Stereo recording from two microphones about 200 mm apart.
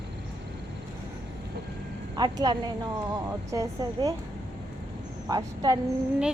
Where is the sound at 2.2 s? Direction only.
20° right (ahead or behind).